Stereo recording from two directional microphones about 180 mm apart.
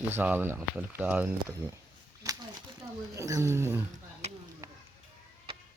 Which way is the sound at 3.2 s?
15° right (ahead or behind).